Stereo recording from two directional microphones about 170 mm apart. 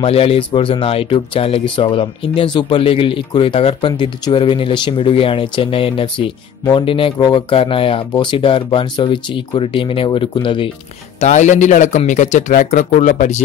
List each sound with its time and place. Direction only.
0.0 s speech: 35° left (ahead or behind)
11.1 s speech: 45° left (ahead or behind)